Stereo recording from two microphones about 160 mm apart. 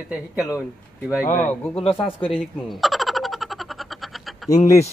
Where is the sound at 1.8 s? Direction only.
35° left (ahead or behind).